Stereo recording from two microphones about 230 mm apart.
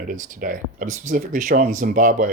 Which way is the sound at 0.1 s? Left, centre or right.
Right.